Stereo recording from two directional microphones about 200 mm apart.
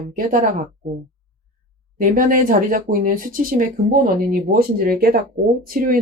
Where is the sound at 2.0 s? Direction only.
40° right (ahead or behind).